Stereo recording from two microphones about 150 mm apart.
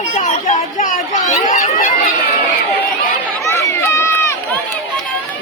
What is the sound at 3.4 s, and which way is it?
Run, 20° left (ahead or behind).